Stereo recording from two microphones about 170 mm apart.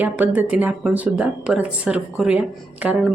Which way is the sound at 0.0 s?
10° right (ahead or behind).